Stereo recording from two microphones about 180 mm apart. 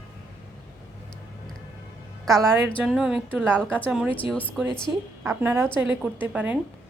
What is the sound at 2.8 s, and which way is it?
A woman's voice, 5° right (ahead or behind).